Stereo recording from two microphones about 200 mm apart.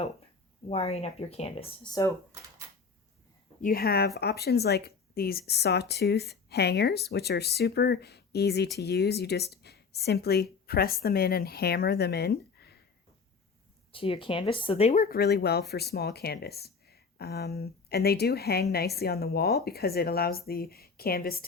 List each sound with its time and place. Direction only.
0.7 s speech: 30° left (ahead or behind)
3.6 s speech: 50° left (ahead or behind)
13.9 s speech: 25° left (ahead or behind)
15.0 s speech: 50° left (ahead or behind)